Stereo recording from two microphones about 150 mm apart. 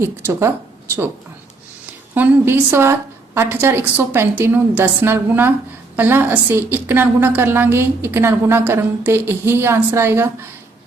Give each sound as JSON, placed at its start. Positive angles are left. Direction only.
{"t": 0.0, "sound": "speech", "side_deg": -20}
{"t": 1.9, "sound": "a woman's voice", "side_deg": -10}